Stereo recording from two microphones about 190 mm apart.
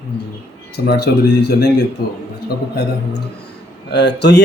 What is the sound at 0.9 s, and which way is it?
Speech, 55° left (ahead or behind).